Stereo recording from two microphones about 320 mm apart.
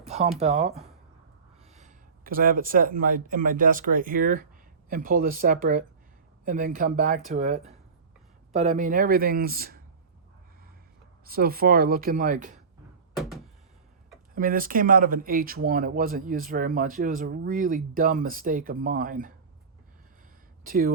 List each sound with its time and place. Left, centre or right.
0.0 s speech: centre
1.7 s speech: right
11.3 s speech: right
13.1 s a sound: centre
14.3 s speech: right
20.7 s speech: right